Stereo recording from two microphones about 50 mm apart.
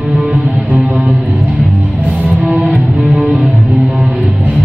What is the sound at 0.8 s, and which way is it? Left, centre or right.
Music, right.